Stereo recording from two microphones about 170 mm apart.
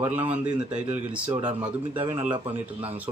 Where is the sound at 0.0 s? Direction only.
10° right (ahead or behind).